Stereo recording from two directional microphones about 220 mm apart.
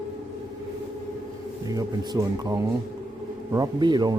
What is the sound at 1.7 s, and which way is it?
Speech, 15° right (ahead or behind).